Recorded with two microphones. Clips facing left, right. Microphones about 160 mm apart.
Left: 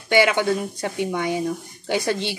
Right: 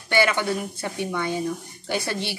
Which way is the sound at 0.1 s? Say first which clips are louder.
Left 4 dB; 15° left (ahead or behind).